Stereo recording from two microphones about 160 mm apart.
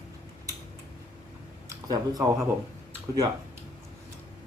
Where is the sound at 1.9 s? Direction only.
25° right (ahead or behind).